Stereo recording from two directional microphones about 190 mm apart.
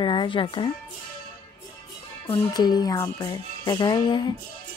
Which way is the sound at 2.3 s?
20° left (ahead or behind).